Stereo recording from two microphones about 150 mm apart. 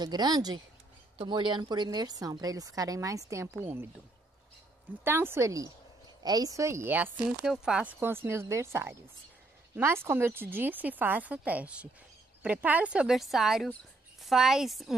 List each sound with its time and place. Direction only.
0.0 s a woman's voice: 30° right (ahead or behind)
5.0 s speech: 15° right (ahead or behind)